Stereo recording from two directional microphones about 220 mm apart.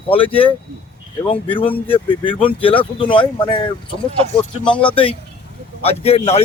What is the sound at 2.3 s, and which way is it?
A man's voice, 25° left (ahead or behind).